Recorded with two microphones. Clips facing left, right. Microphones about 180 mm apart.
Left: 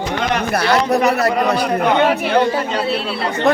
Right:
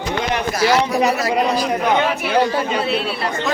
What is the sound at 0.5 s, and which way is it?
Speech, 60° left (ahead or behind).